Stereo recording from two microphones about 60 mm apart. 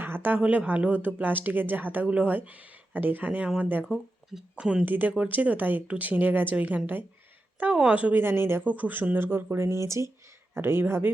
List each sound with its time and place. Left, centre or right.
0.0 s a sound: right
0.3 s a woman's voice: right
3.8 s speech: centre
4.5 s a woman's voice: centre
4.9 s a woman's voice: right
7.7 s a woman's voice: centre
8.1 s speech: right
8.6 s speech: right
10.5 s speech: right